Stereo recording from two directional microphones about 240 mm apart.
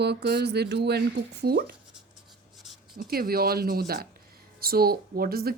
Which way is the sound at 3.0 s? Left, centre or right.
Right.